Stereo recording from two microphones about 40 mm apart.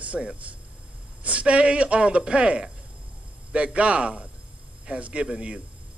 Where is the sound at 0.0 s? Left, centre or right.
Right.